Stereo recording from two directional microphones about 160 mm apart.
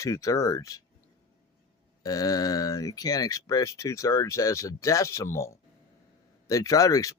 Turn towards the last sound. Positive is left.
turn(degrees=20)  # may be behind; listen again after turning